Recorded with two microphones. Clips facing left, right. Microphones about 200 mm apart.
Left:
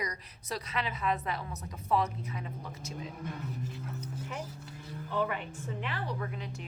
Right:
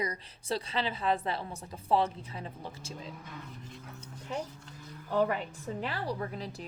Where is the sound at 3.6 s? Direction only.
Centre (ahead or behind).